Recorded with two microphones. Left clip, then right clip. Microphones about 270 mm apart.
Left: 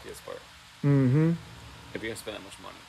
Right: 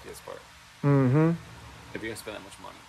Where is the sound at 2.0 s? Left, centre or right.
Centre.